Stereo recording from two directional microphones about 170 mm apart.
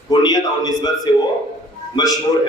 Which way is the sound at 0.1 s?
25° left (ahead or behind).